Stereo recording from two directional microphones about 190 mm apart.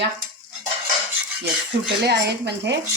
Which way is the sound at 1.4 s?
60° right (ahead or behind).